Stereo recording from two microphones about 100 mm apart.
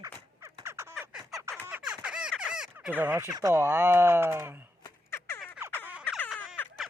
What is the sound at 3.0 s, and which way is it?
Speech, 20° right (ahead or behind).